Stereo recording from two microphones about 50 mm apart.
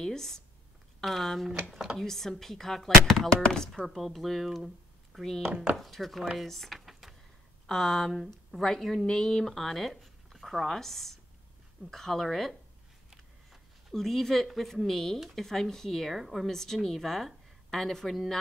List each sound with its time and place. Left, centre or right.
0.0 s speech: centre
3.8 s speech: centre
5.5 s speech: right
5.8 s speech: centre
6.3 s a sound: centre
7.6 s speech: centre
13.1 s a sound: centre
13.9 s speech: centre